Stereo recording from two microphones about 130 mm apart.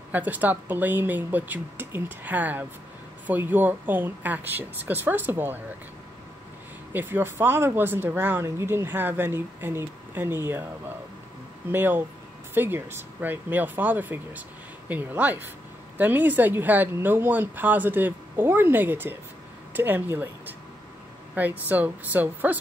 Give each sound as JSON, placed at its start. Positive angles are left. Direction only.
{"t": 0.1, "sound": "speech", "side_deg": -15}
{"t": 6.9, "sound": "speech", "side_deg": -15}
{"t": 11.7, "sound": "speech", "side_deg": -15}